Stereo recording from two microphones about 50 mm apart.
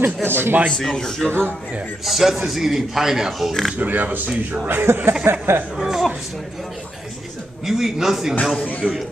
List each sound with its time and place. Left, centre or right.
0.0 s speech: right
0.7 s a man's voice: centre
2.0 s a man's voice: centre
3.7 s speech: right
5.8 s speech: centre
7.6 s a man's voice: centre
8.8 s speech: right